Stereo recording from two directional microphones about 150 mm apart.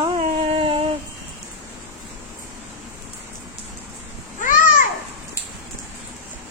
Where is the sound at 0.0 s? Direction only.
40° right (ahead or behind).